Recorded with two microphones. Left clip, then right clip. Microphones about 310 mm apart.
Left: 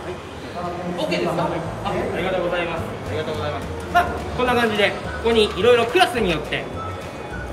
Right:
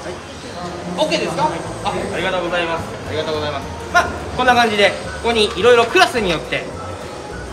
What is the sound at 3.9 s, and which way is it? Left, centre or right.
A man's voice, centre.